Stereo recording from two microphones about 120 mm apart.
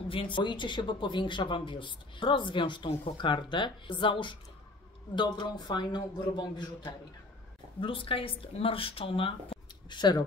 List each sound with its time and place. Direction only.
0.1 s a man's voice: 45° left (ahead or behind)
7.8 s speech: 50° left (ahead or behind)